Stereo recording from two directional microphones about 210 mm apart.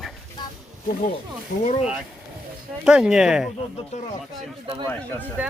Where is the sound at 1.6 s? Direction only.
30° left (ahead or behind).